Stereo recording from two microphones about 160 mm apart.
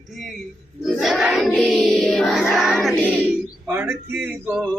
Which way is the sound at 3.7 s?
15° right (ahead or behind).